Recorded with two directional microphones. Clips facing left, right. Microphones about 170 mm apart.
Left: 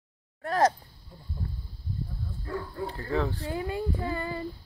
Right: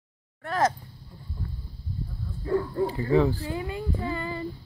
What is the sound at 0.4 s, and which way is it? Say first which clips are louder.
Speech: left 1 dB; 35° left (ahead or behind).